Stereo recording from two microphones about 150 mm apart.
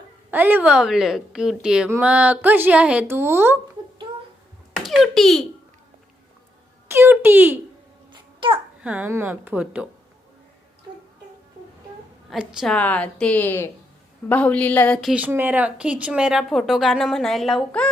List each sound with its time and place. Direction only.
0.3 s speech: 10° right (ahead or behind)
4.8 s a child's voice: centre (ahead or behind)
6.8 s speech: 15° right (ahead or behind)
8.1 s babbling: 35° right (ahead or behind)
8.8 s speech: 10° right (ahead or behind)
12.3 s speech: 5° right (ahead or behind)
12.7 s a woman's voice: 10° left (ahead or behind)
15.1 s speech: 10° right (ahead or behind); by 17.8 s 5° left (ahead or behind)